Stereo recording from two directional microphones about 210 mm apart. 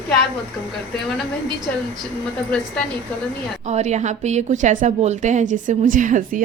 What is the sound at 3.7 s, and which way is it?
A woman's voice, 35° right (ahead or behind).